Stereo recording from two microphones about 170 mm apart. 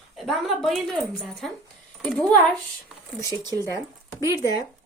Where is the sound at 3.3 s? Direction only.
25° right (ahead or behind).